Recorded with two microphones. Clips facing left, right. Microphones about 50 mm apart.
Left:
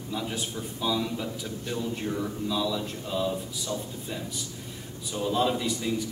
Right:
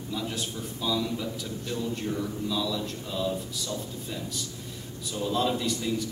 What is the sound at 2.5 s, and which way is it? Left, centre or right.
A man's voice, centre.